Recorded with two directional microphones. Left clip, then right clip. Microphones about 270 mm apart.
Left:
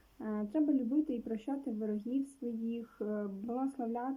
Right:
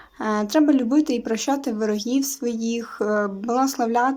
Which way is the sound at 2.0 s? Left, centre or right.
Right.